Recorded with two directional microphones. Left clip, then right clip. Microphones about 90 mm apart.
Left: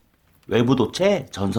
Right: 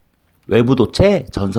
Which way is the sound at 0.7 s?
35° right (ahead or behind).